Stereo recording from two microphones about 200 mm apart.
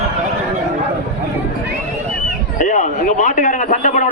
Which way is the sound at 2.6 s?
35° left (ahead or behind).